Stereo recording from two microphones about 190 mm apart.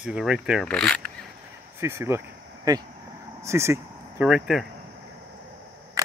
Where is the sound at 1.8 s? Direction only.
15° right (ahead or behind).